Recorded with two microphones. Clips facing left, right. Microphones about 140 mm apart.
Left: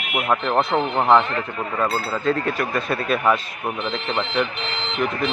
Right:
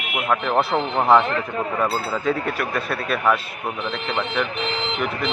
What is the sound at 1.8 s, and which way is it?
Speech, 10° right (ahead or behind).